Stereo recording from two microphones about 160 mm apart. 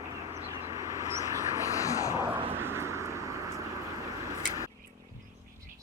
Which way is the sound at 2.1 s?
30° right (ahead or behind).